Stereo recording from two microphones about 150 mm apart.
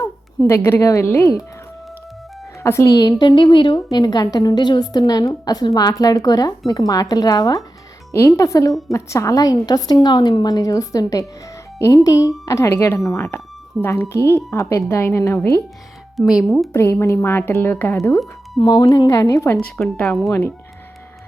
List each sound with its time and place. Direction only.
0.0 s a woman's voice: 20° left (ahead or behind)
2.6 s a woman's voice: 20° left (ahead or behind)
16.1 s speech: centre (ahead or behind)
16.7 s a woman's voice: 20° left (ahead or behind)
19.5 s speech: 5° left (ahead or behind)
20.2 s speech: 15° left (ahead or behind)